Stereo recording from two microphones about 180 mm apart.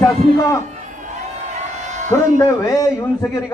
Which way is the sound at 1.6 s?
40° right (ahead or behind).